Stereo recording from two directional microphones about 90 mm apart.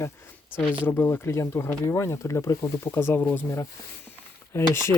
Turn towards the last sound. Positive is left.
turn(degrees=30)  # may be behind; listen again after turning